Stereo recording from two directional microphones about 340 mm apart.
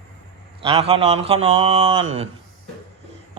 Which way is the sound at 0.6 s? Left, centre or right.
Centre.